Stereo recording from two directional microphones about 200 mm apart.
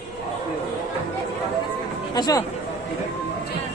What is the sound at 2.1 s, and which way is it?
Speech, 20° left (ahead or behind).